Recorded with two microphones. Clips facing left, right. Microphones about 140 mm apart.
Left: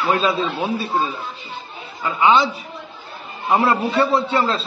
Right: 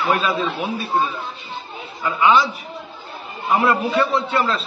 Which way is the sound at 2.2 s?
25° left (ahead or behind).